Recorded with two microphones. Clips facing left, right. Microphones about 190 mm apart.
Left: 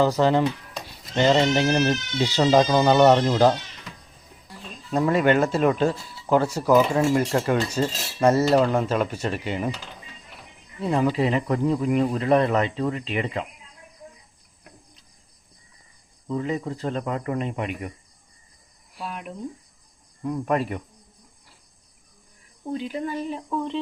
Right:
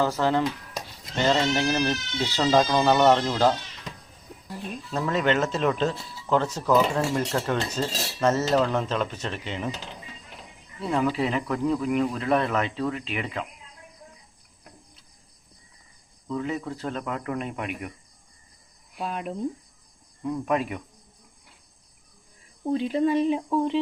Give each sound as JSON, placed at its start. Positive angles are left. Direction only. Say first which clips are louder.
{"t": 0.0, "sound": "speech", "louder": "left 4 dB", "side_deg": 15}
{"t": 4.9, "sound": "speech", "louder": "left 5 dB", "side_deg": 10}
{"t": 10.8, "sound": "speech", "louder": "left 3 dB", "side_deg": 15}
{"t": 11.2, "sound": "speech", "louder": "left 3 dB", "side_deg": 0}
{"t": 16.3, "sound": "speech", "louder": "left 3 dB", "side_deg": 0}
{"t": 20.2, "sound": "speech", "louder": "left 2 dB", "side_deg": 5}
{"t": 22.7, "sound": "speech", "louder": "right 6 dB", "side_deg": -25}